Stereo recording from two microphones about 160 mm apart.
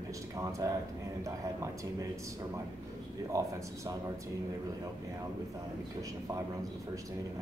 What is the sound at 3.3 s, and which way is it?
Speech, 20° right (ahead or behind).